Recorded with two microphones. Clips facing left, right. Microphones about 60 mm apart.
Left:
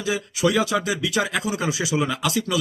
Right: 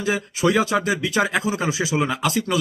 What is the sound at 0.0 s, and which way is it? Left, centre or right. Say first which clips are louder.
A man's voice: right 2 dB; right.